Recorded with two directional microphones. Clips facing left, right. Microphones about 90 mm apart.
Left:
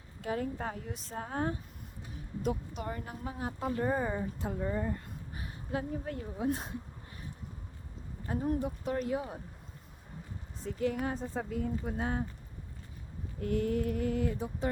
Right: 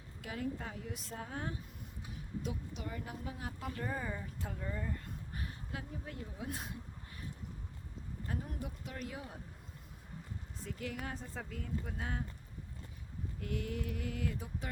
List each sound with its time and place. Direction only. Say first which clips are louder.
0.2 s a woman's voice: left 6 dB; 40° left (ahead or behind)
0.9 s a woman's voice: left 7 dB; 35° left (ahead or behind)
4.9 s a sound: left 1 dB; 15° left (ahead or behind)
5.9 s a woman's voice: left 8 dB; 50° left (ahead or behind)
6.4 s a woman's voice: left 11 dB; 30° left (ahead or behind)
8.3 s a woman's voice: left 12 dB; 30° left (ahead or behind)
10.6 s a woman's voice: left 10 dB; 30° left (ahead or behind)
11.1 s speech: left 9 dB; 20° left (ahead or behind)
13.4 s a woman's voice: left 10 dB; 40° left (ahead or behind)